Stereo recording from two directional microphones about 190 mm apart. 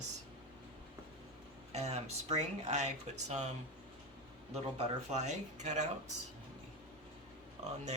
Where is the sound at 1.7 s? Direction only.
35° right (ahead or behind).